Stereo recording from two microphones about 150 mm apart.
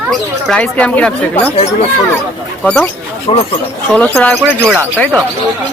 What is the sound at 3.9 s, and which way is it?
Speech, 5° left (ahead or behind).